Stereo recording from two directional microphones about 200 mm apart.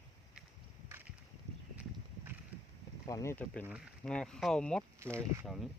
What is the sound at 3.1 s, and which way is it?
Speech, 15° left (ahead or behind).